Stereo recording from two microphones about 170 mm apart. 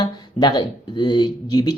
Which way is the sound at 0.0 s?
25° left (ahead or behind).